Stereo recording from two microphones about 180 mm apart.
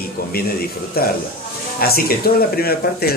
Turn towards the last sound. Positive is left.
turn(degrees=55)  # may be behind; listen again after turning